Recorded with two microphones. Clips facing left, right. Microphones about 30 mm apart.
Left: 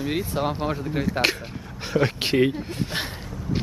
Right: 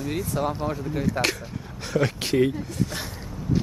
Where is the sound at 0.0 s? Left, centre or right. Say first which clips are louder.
Left 1 dB; left.